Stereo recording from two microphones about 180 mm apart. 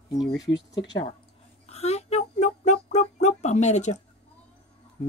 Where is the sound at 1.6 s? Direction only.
35° left (ahead or behind).